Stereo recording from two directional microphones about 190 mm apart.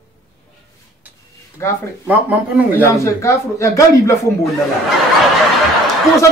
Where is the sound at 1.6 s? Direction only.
15° left (ahead or behind).